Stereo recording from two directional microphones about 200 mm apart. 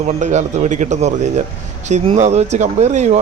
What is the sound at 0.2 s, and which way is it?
Speech, 35° right (ahead or behind).